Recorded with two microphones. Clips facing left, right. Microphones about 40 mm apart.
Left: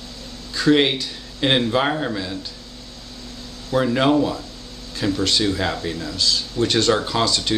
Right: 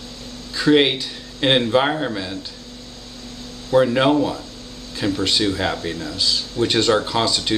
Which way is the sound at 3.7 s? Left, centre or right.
Centre.